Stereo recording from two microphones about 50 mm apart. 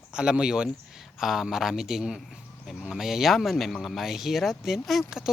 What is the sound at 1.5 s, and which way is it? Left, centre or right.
Speech, centre.